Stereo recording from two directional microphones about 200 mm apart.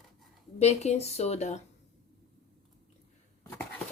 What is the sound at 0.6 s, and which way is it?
Speech, 35° left (ahead or behind).